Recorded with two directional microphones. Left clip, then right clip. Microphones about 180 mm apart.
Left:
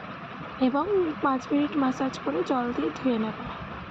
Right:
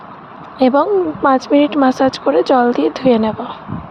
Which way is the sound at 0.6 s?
60° right (ahead or behind).